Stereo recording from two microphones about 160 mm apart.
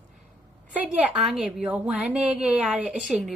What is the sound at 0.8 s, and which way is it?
A woman's voice, 5° right (ahead or behind).